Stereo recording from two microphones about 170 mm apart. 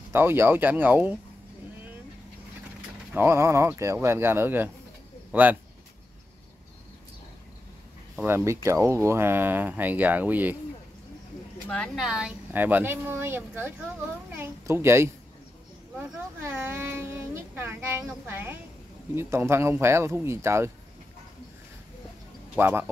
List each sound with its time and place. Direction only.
0.1 s speech: 15° right (ahead or behind)
3.2 s speech: 15° right (ahead or behind)
8.2 s speech: 15° right (ahead or behind)
11.7 s speech: 5° left (ahead or behind); by 15.0 s 15° right (ahead or behind)
16.5 s speech: 10° right (ahead or behind)
22.6 s speech: 10° right (ahead or behind)